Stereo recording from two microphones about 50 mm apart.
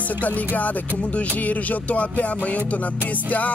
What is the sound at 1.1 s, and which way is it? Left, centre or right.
Music, left.